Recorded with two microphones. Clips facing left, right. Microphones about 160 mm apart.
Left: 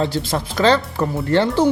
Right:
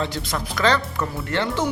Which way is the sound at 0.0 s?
30° left (ahead or behind).